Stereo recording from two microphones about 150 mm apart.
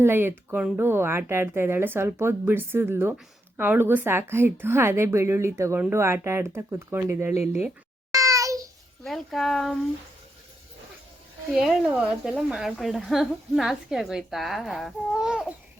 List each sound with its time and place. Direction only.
0.0 s speech: 15° right (ahead or behind)
8.1 s child singing: 20° right (ahead or behind)
9.0 s speech: centre (ahead or behind)
11.5 s speech: 5° right (ahead or behind)